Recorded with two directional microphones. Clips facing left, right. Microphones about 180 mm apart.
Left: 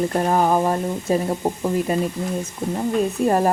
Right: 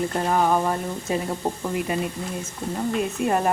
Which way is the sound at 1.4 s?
15° left (ahead or behind).